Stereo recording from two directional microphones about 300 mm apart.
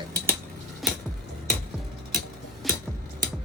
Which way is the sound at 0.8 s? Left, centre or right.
Centre.